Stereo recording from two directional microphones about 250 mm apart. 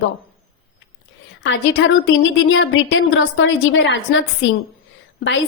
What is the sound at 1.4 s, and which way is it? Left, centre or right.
A woman's voice, left.